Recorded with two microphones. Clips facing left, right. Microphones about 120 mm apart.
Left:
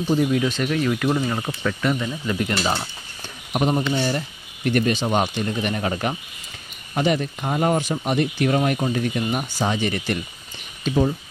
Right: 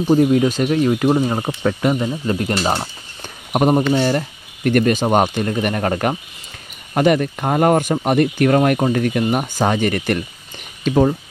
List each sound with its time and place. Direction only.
0.1 s speech: 40° right (ahead or behind)
3.5 s speech: 40° right (ahead or behind)
3.9 s speech: 55° right (ahead or behind)